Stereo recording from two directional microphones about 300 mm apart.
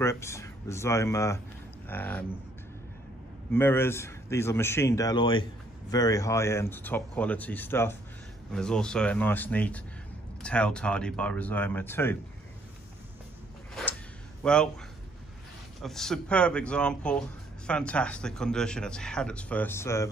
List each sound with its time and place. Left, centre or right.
0.0 s speech: centre
3.5 s speech: centre
14.4 s speech: centre
15.8 s speech: centre